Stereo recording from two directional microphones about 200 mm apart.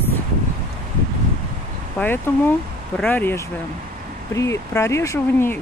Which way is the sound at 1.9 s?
10° left (ahead or behind).